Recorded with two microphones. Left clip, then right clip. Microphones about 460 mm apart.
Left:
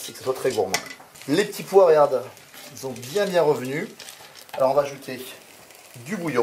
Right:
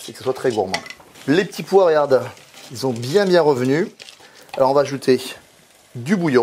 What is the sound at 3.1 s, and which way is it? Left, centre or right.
Speech, right.